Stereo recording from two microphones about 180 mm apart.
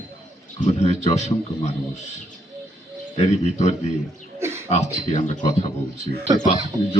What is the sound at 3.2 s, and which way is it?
Speech, 40° left (ahead or behind).